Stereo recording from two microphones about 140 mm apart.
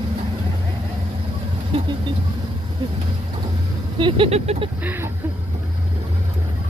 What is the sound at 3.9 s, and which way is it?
Speech, 35° right (ahead or behind).